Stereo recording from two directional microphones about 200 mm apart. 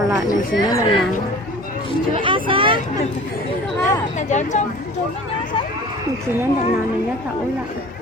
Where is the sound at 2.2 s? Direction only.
25° right (ahead or behind).